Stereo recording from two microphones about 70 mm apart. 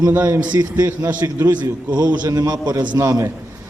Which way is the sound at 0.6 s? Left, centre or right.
Right.